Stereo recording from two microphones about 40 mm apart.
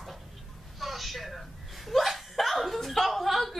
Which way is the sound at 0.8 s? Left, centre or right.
Centre.